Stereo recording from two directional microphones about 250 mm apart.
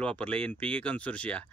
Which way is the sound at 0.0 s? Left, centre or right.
Centre.